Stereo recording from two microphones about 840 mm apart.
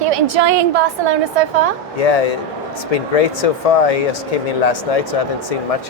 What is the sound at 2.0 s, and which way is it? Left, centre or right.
Speech, left.